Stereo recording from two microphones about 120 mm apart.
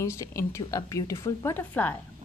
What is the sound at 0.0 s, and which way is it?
Speech, 25° left (ahead or behind).